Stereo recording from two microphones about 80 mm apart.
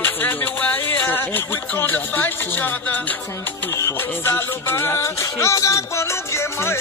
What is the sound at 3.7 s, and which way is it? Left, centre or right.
Music, left.